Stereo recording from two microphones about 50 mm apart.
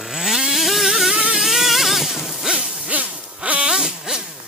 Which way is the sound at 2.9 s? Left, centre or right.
Right.